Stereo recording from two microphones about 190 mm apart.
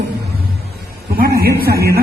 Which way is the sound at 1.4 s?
55° right (ahead or behind).